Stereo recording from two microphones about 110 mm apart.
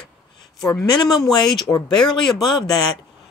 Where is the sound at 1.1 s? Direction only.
35° left (ahead or behind).